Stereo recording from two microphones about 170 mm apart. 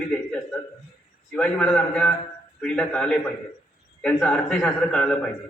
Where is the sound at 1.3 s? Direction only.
5° left (ahead or behind).